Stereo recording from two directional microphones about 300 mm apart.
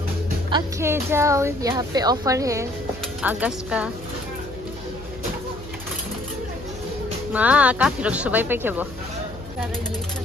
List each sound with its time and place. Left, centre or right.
0.5 s a woman's voice: centre
7.3 s speech: centre